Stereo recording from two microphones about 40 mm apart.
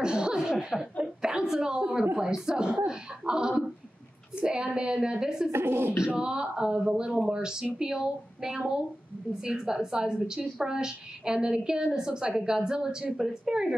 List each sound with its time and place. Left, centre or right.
0.0 s chuckle: centre
2.1 s a woman's voice: centre
5.5 s speech: right
6.0 s a woman's voice: right